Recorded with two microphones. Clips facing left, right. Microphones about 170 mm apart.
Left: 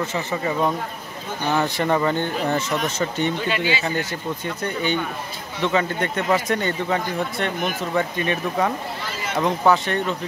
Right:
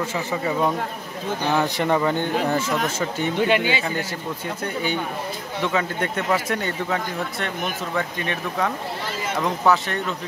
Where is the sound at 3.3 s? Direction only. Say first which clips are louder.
Right 3 dB; 60° right (ahead or behind).